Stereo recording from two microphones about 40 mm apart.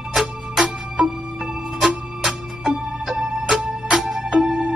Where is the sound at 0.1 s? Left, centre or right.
Centre.